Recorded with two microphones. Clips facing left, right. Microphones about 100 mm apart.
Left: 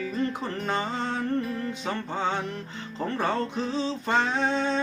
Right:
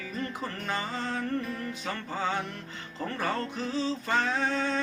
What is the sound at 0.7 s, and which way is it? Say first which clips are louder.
Music: left 4 dB; 25° left (ahead or behind).